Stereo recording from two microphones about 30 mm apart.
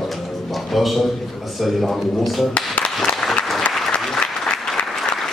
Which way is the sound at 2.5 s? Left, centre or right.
Left.